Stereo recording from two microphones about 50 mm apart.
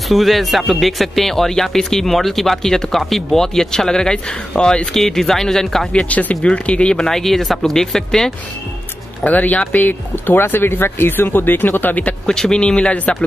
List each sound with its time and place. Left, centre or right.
0.1 s speech: centre
5.9 s speech: left; by 8.3 s centre
9.2 s speech: left
10.1 s speech: left
12.3 s a man's voice: centre